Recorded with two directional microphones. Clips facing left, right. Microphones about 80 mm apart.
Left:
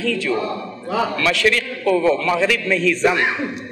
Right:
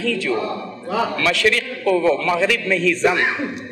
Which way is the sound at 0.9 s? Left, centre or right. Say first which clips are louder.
Even; centre.